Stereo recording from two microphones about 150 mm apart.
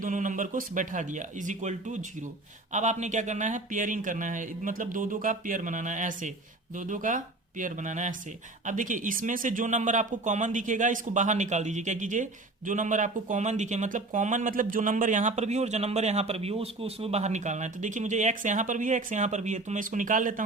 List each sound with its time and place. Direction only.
0.0 s speech: 55° right (ahead or behind)